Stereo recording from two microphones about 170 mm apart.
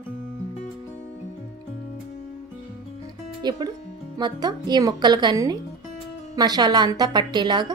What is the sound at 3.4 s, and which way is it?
A woman's voice, 25° right (ahead or behind).